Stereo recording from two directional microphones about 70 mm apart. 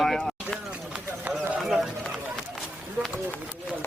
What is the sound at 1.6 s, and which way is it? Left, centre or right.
Run, centre.